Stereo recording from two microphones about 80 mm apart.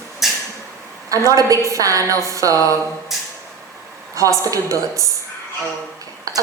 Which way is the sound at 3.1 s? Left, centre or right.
Centre.